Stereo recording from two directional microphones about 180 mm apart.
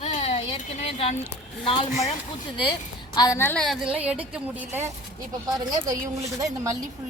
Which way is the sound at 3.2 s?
15° left (ahead or behind).